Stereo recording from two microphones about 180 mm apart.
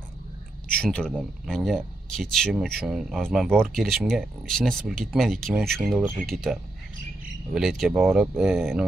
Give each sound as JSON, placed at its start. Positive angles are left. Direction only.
{"t": 0.7, "sound": "speech", "side_deg": 5}